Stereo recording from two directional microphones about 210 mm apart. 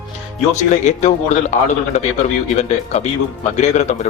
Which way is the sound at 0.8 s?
35° left (ahead or behind).